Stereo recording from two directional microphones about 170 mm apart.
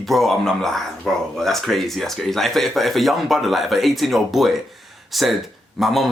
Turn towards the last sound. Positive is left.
turn(degrees=0)  # may be behind; listen again after turning